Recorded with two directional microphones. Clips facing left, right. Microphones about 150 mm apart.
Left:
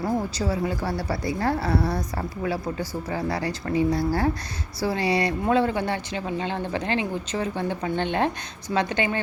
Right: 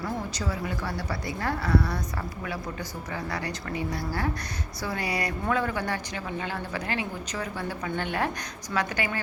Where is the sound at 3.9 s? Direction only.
40° left (ahead or behind).